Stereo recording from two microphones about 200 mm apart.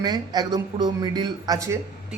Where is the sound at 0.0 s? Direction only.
20° right (ahead or behind).